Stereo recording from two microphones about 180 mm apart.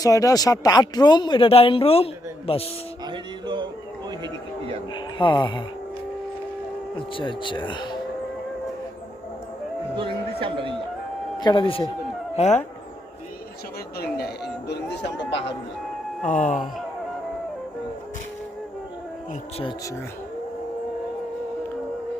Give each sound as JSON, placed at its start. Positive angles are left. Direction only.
{"t": 0.0, "sound": "speech", "side_deg": 20}
{"t": 3.1, "sound": "music", "side_deg": -25}
{"t": 4.2, "sound": "a sound", "side_deg": -30}
{"t": 4.9, "sound": "speech", "side_deg": 25}
{"t": 6.9, "sound": "speech", "side_deg": 25}
{"t": 9.9, "sound": "speech", "side_deg": -30}
{"t": 11.3, "sound": "speech", "side_deg": 25}
{"t": 14.0, "sound": "speech", "side_deg": 60}
{"t": 16.2, "sound": "a sound", "side_deg": 45}
{"t": 19.3, "sound": "speech", "side_deg": 35}